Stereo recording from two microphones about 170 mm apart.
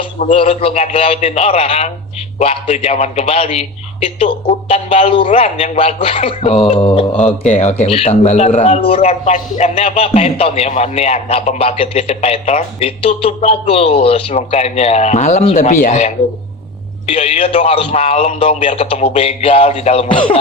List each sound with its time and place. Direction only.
0.3 s speech: 35° left (ahead or behind)